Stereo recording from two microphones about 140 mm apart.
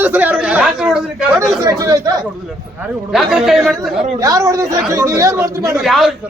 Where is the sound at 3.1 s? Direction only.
5° right (ahead or behind).